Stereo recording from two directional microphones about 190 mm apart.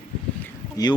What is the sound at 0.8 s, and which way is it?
Speech, 20° left (ahead or behind).